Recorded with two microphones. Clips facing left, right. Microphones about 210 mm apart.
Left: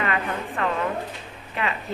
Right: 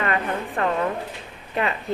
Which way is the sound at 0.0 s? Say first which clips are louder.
Right 2 dB; 40° right (ahead or behind).